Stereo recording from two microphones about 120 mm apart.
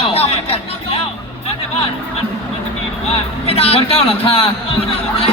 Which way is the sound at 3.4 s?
55° left (ahead or behind).